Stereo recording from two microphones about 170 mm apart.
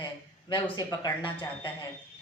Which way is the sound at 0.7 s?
25° left (ahead or behind).